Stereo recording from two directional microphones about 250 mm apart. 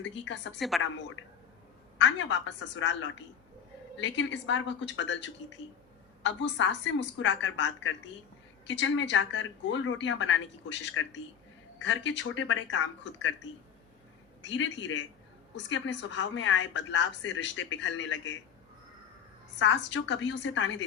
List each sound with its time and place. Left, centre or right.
0.7 s a woman's voice: centre
1.2 s a woman's voice: left
14.5 s a woman's voice: left
19.5 s a woman's voice: left